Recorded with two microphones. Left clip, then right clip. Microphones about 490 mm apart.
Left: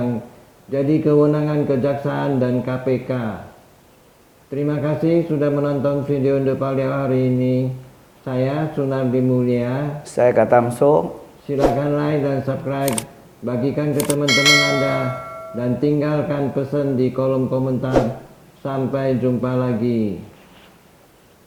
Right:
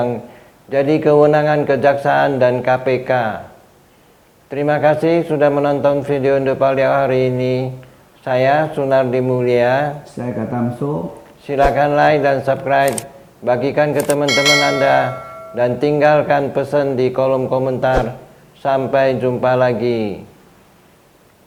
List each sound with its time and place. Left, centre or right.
0.7 s a man's voice: right
4.5 s a man's voice: right
10.2 s speech: left
11.4 s a man's voice: right
14.3 s speech: centre
15.5 s a man's voice: right